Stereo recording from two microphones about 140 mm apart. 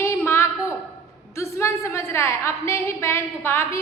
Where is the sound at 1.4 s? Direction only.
20° left (ahead or behind).